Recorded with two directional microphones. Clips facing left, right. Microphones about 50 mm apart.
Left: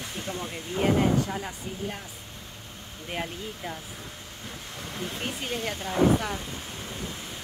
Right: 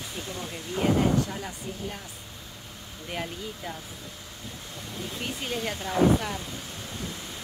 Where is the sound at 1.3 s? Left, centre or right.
Centre.